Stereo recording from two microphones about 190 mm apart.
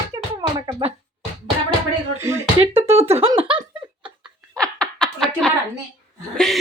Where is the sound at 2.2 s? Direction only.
15° right (ahead or behind).